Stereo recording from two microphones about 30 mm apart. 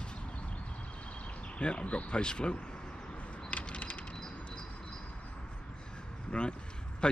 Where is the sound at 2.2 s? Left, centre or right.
Left.